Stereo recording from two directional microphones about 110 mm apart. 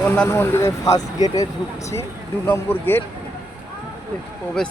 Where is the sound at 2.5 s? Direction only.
20° left (ahead or behind).